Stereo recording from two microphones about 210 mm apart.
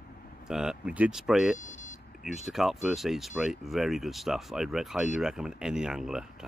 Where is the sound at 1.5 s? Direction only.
35° left (ahead or behind).